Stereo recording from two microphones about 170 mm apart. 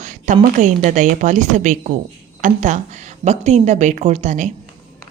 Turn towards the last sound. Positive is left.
turn(degrees=-45)  # may be behind; listen again after turning